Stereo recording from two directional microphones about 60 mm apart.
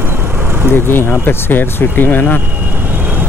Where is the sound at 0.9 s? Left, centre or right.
Left.